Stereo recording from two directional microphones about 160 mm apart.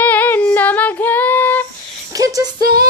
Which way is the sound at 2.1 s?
20° right (ahead or behind).